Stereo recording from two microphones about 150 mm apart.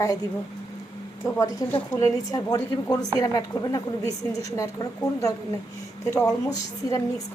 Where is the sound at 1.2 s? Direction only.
25° left (ahead or behind).